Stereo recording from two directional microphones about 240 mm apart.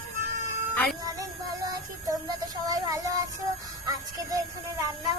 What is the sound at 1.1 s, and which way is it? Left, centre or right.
Child singing, centre.